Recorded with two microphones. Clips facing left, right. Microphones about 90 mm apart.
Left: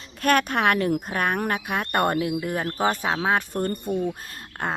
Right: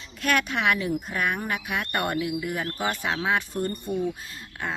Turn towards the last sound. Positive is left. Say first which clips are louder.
# left 3 dB
turn(degrees=55)  # may be behind; listen again after turning